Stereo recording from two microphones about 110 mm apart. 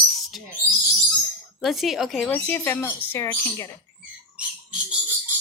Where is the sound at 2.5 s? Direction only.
20° left (ahead or behind).